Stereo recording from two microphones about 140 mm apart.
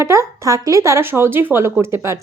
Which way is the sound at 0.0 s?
20° right (ahead or behind).